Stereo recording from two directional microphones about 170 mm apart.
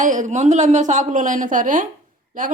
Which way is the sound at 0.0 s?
50° right (ahead or behind).